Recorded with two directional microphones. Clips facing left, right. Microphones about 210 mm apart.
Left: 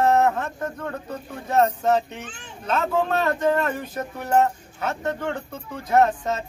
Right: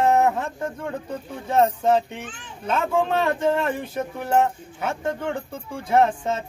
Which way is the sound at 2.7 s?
10° right (ahead or behind).